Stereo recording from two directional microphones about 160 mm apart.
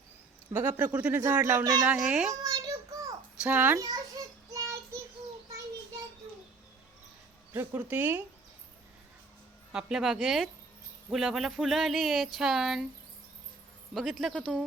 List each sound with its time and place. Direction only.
0.5 s speech: 10° right (ahead or behind)
1.9 s speech: 5° right (ahead or behind)
2.4 s child singing: 25° right (ahead or behind)
3.4 s speech: 10° right (ahead or behind)
3.8 s a sound: 25° right (ahead or behind)
7.5 s speech: 15° right (ahead or behind)
9.7 s speech: 5° right (ahead or behind)
13.9 s speech: centre (ahead or behind)